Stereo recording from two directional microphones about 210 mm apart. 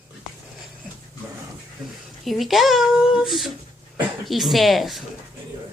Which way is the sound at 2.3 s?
Centre (ahead or behind).